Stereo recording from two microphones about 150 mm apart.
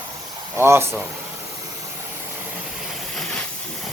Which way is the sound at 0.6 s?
15° right (ahead or behind).